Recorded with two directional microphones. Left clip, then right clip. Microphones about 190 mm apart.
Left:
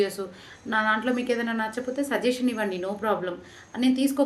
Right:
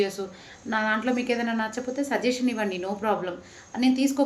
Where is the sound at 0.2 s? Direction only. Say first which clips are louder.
Even; 5° left (ahead or behind).